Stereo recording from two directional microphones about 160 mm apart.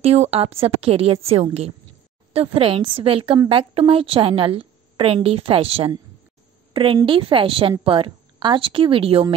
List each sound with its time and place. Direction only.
0.0 s a woman's voice: 40° right (ahead or behind)